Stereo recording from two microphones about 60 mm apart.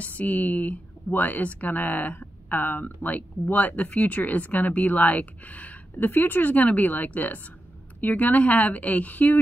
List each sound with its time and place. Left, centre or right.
0.0 s speech: left